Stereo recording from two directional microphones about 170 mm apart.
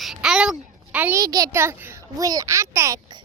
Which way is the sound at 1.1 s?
20° right (ahead or behind).